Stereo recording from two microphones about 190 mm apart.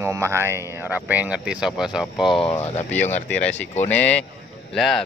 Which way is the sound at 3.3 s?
5° left (ahead or behind).